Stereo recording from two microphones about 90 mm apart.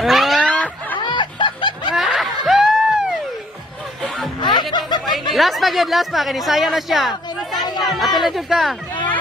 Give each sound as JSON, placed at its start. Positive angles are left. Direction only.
{"t": 0.0, "sound": "a sound", "side_deg": 0}
{"t": 0.4, "sound": "a sound", "side_deg": 15}
{"t": 0.9, "sound": "snicker", "side_deg": 60}
{"t": 1.9, "sound": "screaming", "side_deg": 0}
{"t": 4.4, "sound": "snicker", "side_deg": 60}
{"t": 5.3, "sound": "speech", "side_deg": 0}